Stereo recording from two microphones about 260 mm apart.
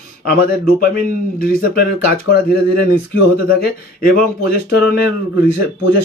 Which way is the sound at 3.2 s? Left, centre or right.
Left.